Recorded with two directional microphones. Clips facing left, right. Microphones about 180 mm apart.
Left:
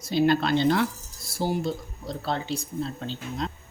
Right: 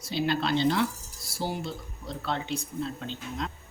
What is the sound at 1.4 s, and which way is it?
Speech, 40° left (ahead or behind).